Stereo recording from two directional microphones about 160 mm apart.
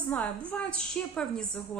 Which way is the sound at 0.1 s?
10° left (ahead or behind).